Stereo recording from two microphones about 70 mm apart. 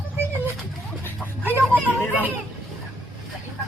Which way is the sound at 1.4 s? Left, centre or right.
Right.